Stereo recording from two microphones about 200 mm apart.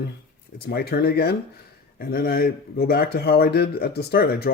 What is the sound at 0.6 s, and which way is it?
Speech, 50° left (ahead or behind).